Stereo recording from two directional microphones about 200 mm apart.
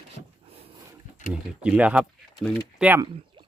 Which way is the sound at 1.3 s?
5° right (ahead or behind).